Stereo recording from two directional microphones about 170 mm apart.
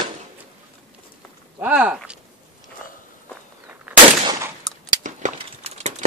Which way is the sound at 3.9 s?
5° right (ahead or behind).